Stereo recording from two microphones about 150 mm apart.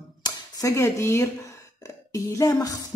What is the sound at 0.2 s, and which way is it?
Speech, 25° left (ahead or behind).